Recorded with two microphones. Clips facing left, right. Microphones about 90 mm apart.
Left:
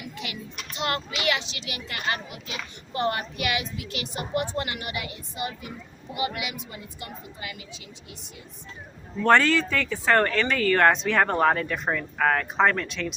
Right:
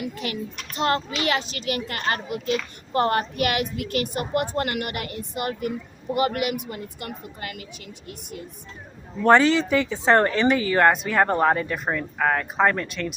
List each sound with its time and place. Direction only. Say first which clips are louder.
0.0 s a child's voice: right 7 dB; 45° right (ahead or behind)
9.2 s speech: right 3 dB; 15° right (ahead or behind)